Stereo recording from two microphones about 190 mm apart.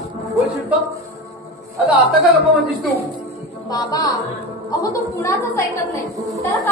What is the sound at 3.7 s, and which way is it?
A woman's voice, 20° left (ahead or behind).